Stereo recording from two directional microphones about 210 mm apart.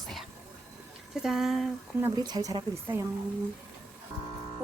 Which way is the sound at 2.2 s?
20° right (ahead or behind).